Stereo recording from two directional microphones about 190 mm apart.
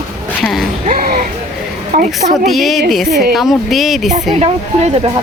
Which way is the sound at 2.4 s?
Centre (ahead or behind).